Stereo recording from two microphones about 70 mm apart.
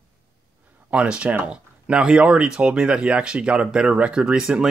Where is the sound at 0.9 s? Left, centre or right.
Centre.